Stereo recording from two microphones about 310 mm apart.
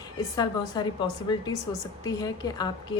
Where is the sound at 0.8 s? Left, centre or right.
Centre.